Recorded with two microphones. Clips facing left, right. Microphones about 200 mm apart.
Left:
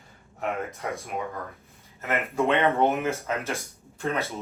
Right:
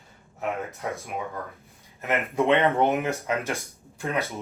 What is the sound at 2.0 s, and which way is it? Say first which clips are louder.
Speech: right 1 dB; 15° right (ahead or behind).